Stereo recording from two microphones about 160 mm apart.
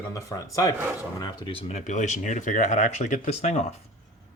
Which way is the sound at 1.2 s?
30° left (ahead or behind).